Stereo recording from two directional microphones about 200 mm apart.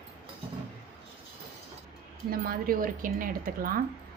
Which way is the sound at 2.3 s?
45° right (ahead or behind).